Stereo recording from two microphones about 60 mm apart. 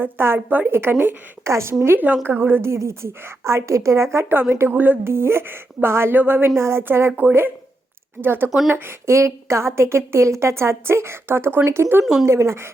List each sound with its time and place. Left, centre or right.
0.0 s a woman's voice: right
1.5 s a woman's voice: right
2.2 s a woman's voice: right
4.3 s a woman's voice: right
5.0 s a woman's voice: right
8.2 s a woman's voice: right
8.4 s speech: centre
8.7 s a woman's voice: right